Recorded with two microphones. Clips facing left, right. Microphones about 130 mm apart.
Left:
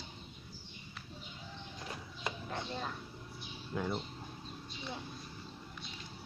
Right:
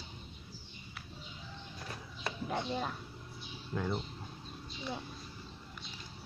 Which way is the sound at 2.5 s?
15° right (ahead or behind).